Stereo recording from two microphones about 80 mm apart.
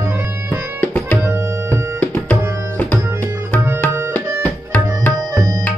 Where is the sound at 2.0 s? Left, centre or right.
Centre.